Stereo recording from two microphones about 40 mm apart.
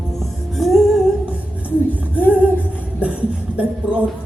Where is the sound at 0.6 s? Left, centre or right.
Centre.